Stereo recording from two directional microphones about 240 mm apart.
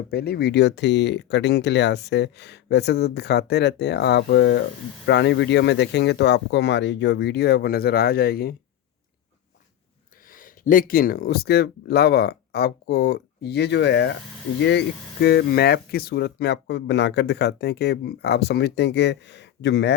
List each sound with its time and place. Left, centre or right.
0.1 s speech: left
10.3 s speech: left